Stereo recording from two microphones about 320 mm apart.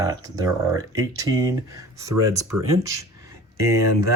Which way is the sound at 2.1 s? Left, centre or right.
Right.